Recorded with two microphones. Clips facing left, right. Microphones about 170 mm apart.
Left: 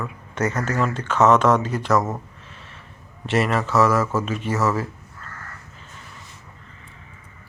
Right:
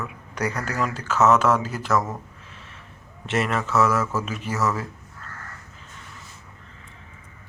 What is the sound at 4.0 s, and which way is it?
Speech, 30° left (ahead or behind).